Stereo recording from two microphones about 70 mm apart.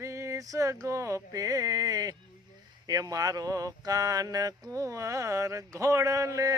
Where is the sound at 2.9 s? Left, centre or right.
Right.